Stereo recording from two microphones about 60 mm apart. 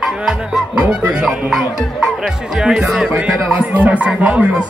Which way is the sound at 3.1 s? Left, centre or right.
Centre.